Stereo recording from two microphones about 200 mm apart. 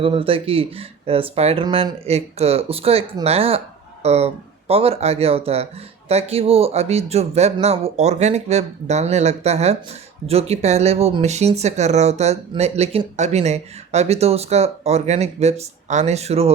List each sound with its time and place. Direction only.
0.0 s speech: 25° right (ahead or behind)